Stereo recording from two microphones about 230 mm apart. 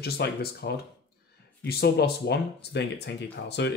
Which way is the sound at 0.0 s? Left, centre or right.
Left.